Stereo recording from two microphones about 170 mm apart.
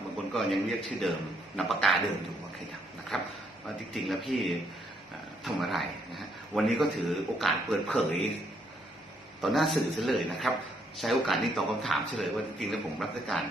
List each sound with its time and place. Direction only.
0.3 s a man's voice: centre (ahead or behind)
3.1 s a man's voice: centre (ahead or behind)
5.5 s a man's voice: centre (ahead or behind)
9.4 s a man's voice: centre (ahead or behind)